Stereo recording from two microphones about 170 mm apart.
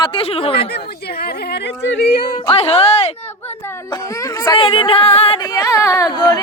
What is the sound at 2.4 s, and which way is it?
Speech, 35° left (ahead or behind).